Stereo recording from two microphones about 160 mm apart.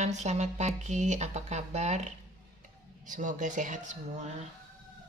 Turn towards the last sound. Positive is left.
turn(degrees=-50)  # may be behind; listen again after turning